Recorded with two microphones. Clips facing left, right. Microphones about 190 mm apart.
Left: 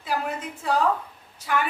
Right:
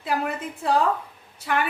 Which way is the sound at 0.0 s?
60° right (ahead or behind).